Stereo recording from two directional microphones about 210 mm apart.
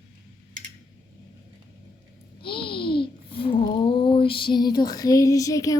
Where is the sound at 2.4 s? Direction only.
25° left (ahead or behind).